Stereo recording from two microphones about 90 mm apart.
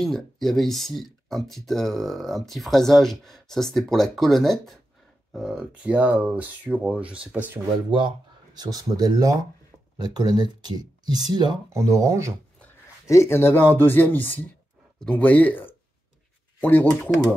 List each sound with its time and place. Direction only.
0.0 s speech: 5° left (ahead or behind)
5.3 s speech: 10° right (ahead or behind)
8.5 s speech: 45° right (ahead or behind)
11.7 s speech: 35° right (ahead or behind)
13.0 s speech: 30° left (ahead or behind)